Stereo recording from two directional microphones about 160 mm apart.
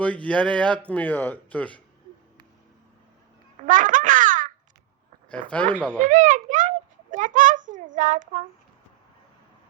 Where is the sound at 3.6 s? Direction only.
55° right (ahead or behind).